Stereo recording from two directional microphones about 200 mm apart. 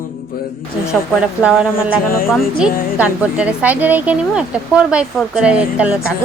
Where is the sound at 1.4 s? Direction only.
5° right (ahead or behind).